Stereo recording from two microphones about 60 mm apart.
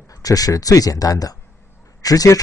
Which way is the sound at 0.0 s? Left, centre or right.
Left.